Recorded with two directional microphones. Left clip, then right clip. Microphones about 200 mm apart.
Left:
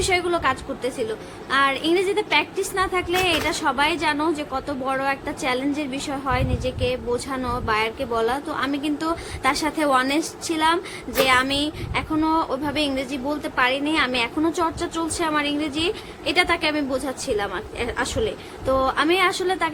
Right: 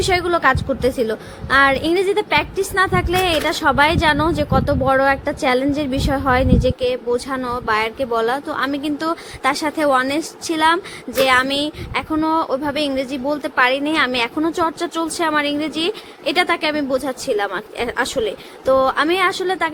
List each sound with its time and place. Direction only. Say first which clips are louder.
0.0 s a woman's voice: right 5 dB; 25° right (ahead or behind)